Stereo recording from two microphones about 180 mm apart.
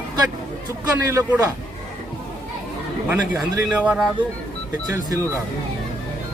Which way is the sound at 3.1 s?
10° right (ahead or behind).